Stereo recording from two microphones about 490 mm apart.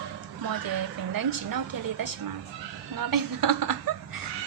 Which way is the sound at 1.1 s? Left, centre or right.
Right.